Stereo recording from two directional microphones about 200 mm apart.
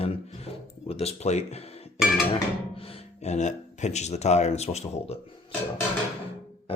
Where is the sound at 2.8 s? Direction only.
30° left (ahead or behind).